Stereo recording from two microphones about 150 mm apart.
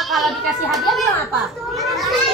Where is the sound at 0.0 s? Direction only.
Centre (ahead or behind).